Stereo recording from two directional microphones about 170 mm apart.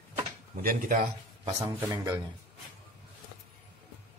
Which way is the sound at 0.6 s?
55° right (ahead or behind).